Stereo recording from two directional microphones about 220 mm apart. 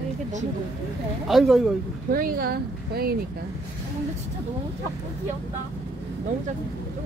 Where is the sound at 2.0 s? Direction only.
40° right (ahead or behind).